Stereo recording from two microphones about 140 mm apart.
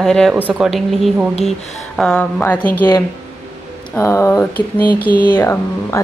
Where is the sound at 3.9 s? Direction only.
20° left (ahead or behind).